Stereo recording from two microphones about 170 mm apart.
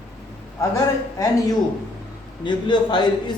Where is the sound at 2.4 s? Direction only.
25° left (ahead or behind).